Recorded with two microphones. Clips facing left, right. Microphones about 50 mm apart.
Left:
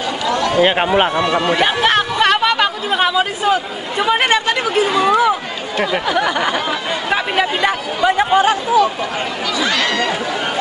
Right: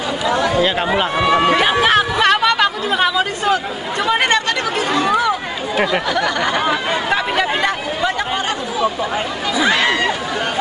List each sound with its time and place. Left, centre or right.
0.6 s speech: left
1.1 s speech: centre
1.6 s speech: centre
7.1 s chatter: centre
9.6 s a sound: centre